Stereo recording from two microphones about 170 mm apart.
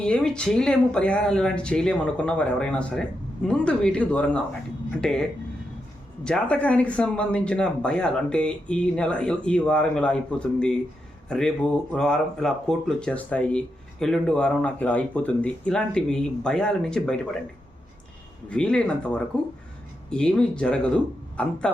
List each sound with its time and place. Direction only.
0.0 s speech: 5° left (ahead or behind)
11.3 s speech: 5° left (ahead or behind)
18.4 s speech: 5° left (ahead or behind)